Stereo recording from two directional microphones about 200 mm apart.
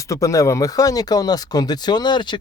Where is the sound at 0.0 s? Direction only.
15° left (ahead or behind).